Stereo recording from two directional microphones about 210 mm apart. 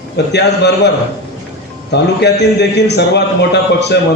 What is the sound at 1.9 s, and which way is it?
A man's voice, 55° left (ahead or behind).